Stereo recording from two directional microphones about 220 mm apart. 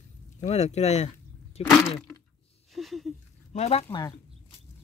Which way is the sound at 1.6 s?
25° left (ahead or behind).